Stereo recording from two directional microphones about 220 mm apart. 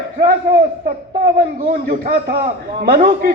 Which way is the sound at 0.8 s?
45° right (ahead or behind).